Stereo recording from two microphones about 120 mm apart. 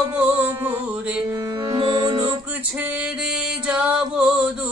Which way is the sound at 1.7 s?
40° right (ahead or behind).